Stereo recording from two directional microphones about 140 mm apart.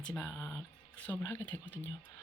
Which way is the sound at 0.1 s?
15° left (ahead or behind).